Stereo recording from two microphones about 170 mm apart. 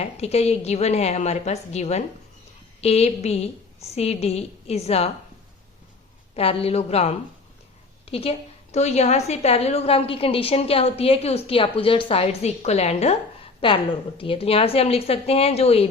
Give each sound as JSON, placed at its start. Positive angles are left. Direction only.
{"t": 0.0, "sound": "a woman's voice", "side_deg": 40}
{"t": 6.3, "sound": "a woman's voice", "side_deg": 35}